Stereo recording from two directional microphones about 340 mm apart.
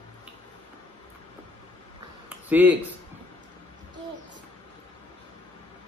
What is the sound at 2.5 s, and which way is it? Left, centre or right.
Speech, centre.